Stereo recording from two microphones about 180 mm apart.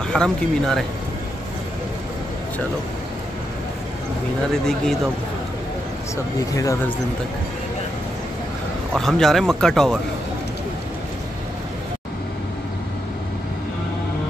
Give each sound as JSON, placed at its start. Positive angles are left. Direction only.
{"t": 0.1, "sound": "speech", "side_deg": 5}
{"t": 4.6, "sound": "speech", "side_deg": 5}
{"t": 6.5, "sound": "speech", "side_deg": 20}
{"t": 8.9, "sound": "speech", "side_deg": 0}